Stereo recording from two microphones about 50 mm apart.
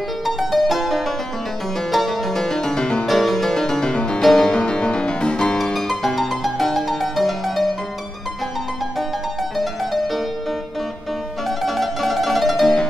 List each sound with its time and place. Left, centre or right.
0.4 s music: centre
3.1 s music: centre
5.6 s music: centre
11.6 s music: centre